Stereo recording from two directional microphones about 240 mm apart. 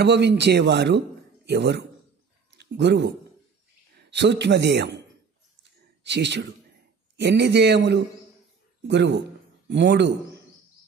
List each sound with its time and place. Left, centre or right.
0.0 s a man's voice: right
5.6 s a sound: right
7.2 s a man's voice: right